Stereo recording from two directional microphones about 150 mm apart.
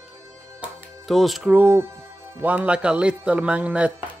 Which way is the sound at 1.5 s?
15° right (ahead or behind).